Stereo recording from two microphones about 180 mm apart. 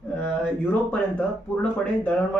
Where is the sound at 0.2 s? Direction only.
10° left (ahead or behind).